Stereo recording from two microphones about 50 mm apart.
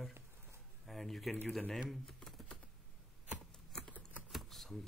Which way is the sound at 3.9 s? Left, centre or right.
Left.